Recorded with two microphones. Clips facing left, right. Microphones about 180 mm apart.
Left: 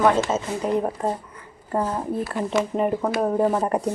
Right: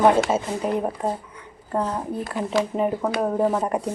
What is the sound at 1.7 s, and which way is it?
Speech, 5° left (ahead or behind).